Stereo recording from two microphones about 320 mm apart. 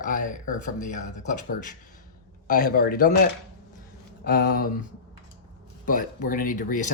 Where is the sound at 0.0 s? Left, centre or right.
Left.